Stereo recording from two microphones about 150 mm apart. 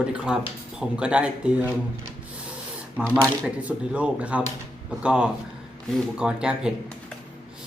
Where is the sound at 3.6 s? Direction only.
10° right (ahead or behind).